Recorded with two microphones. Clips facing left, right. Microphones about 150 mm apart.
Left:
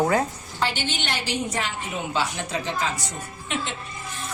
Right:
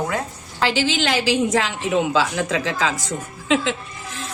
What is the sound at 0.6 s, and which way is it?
A woman's voice, 90° right.